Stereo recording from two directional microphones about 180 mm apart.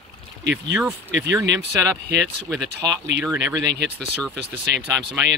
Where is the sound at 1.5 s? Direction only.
15° right (ahead or behind).